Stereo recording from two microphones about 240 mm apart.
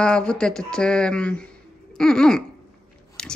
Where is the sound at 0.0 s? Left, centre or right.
Centre.